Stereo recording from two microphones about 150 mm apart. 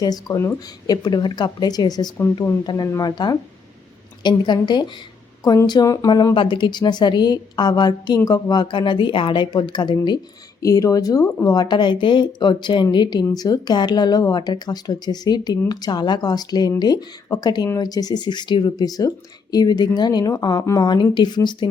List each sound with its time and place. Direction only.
0.0 s speech: 25° left (ahead or behind)